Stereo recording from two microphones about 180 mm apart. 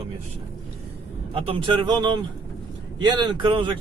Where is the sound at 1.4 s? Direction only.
30° right (ahead or behind).